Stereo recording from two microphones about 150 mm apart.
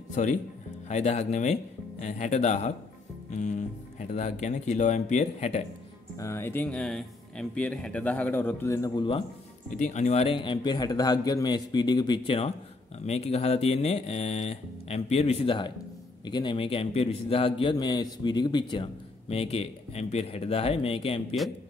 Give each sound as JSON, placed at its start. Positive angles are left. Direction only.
{"t": 0.2, "sound": "speech", "side_deg": 55}
{"t": 6.1, "sound": "speech", "side_deg": 20}
{"t": 9.7, "sound": "a man's voice", "side_deg": 55}